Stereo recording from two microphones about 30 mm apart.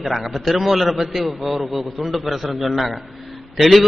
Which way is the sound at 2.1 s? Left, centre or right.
Centre.